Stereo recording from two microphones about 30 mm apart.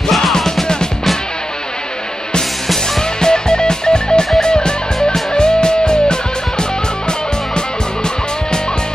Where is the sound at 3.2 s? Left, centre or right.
Left.